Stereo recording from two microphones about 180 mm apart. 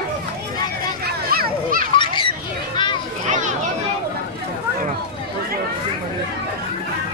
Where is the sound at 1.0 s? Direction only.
55° right (ahead or behind).